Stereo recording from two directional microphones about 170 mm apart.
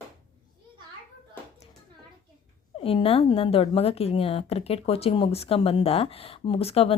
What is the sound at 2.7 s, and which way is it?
A woman's voice, 35° left (ahead or behind).